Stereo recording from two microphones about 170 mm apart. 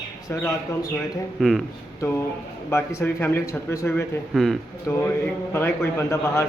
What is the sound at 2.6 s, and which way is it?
A man's voice, 15° left (ahead or behind).